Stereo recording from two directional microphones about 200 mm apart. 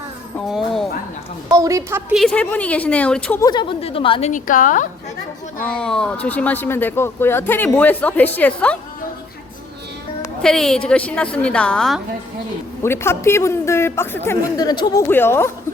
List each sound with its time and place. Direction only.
0.3 s speech: centre (ahead or behind)
1.5 s a woman's voice: 15° right (ahead or behind)
2.1 s speech: 5° left (ahead or behind)
3.4 s a woman's voice: 20° left (ahead or behind)
4.3 s a woman's voice: 40° left (ahead or behind)
5.7 s speech: 5° left (ahead or behind)
10.4 s a woman's voice: centre (ahead or behind)